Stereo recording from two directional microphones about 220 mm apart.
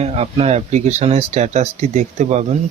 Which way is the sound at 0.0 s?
30° right (ahead or behind).